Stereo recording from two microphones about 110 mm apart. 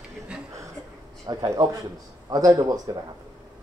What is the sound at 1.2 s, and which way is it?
A man's voice, 40° right (ahead or behind).